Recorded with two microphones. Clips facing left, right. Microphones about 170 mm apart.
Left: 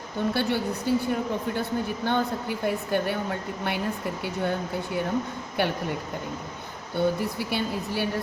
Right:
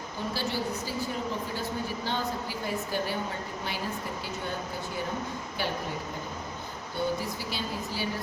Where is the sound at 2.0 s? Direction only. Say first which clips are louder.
Left 8 dB; 55° left (ahead or behind).